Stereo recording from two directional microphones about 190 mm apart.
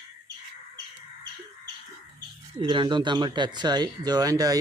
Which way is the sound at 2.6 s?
25° right (ahead or behind).